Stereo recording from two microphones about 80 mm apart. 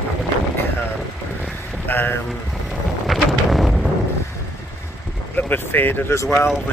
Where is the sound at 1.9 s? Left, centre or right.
Left.